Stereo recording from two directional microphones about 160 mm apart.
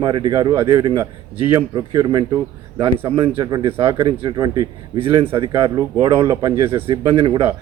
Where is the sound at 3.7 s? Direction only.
15° right (ahead or behind).